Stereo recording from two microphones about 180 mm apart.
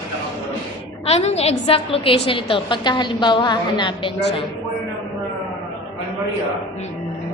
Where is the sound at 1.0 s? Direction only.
35° left (ahead or behind).